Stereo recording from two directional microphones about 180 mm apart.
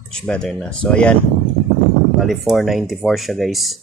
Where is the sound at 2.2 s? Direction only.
Centre (ahead or behind).